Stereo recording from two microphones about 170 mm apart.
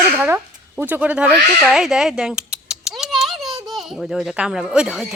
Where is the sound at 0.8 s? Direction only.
10° right (ahead or behind).